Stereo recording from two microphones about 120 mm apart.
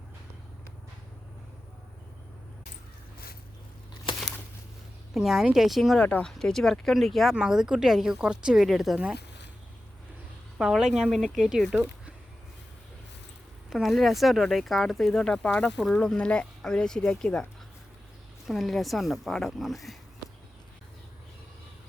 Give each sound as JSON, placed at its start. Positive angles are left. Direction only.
{"t": 4.1, "sound": "crumpling", "side_deg": 45}
{"t": 5.1, "sound": "speech", "side_deg": 0}
{"t": 10.6, "sound": "speech", "side_deg": -5}
{"t": 13.7, "sound": "speech", "side_deg": 0}
{"t": 18.4, "sound": "speech", "side_deg": 0}